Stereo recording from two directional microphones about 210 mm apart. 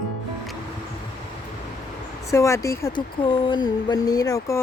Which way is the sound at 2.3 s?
15° left (ahead or behind).